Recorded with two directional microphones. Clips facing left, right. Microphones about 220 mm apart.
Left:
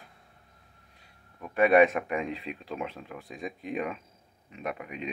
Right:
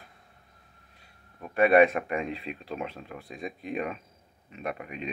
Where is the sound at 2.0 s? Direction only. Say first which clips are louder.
Even; 10° left (ahead or behind).